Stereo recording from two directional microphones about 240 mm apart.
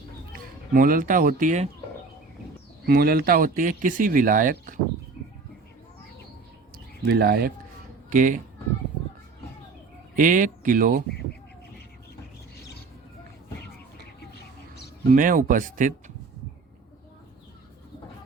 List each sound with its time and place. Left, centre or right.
0.3 s speech: right
2.8 s speech: right
7.1 s speech: right
10.2 s speech: right
15.1 s speech: right